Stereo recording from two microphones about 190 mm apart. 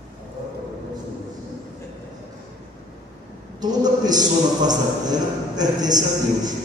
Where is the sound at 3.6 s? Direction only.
20° right (ahead or behind).